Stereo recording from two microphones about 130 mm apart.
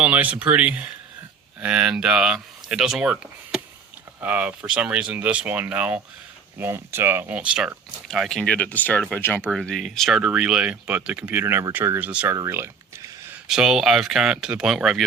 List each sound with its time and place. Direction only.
0.0 s speech: 10° right (ahead or behind); by 9.4 s 15° left (ahead or behind)
9.5 s speech: 5° left (ahead or behind)
12.4 s a sound: 20° right (ahead or behind)
13.5 s speech: 5° right (ahead or behind)